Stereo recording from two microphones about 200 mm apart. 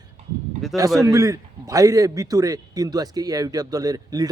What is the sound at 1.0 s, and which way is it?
A man's voice, 15° right (ahead or behind).